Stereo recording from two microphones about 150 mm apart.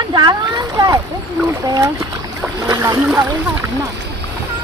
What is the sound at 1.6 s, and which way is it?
Speech, 25° right (ahead or behind).